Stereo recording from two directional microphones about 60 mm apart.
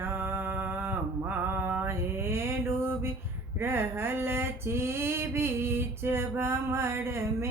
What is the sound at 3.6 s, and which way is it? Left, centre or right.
Female singing, right.